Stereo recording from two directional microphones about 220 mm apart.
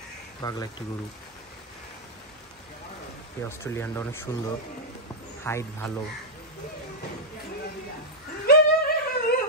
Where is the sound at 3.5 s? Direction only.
10° left (ahead or behind).